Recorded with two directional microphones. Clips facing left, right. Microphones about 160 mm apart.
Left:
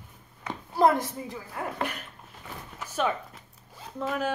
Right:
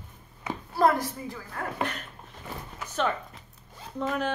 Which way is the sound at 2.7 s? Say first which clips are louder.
Even; 10° left (ahead or behind).